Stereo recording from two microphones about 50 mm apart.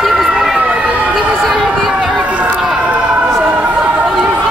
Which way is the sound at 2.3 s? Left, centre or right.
Right.